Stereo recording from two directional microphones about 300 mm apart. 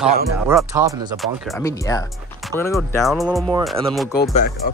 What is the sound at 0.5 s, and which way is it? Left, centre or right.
Speech, centre.